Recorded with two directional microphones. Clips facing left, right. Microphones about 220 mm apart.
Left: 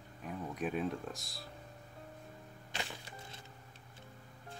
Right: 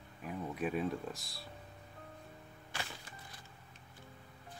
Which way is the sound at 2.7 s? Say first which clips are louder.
Left 2 dB; 25° left (ahead or behind).